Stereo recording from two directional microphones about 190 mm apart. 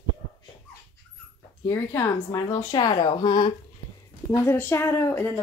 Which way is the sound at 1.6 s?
15° left (ahead or behind).